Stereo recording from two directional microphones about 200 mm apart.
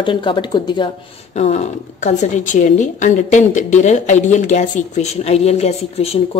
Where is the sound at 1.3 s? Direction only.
35° left (ahead or behind).